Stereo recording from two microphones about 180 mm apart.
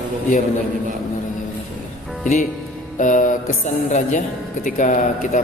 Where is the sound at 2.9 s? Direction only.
45° left (ahead or behind).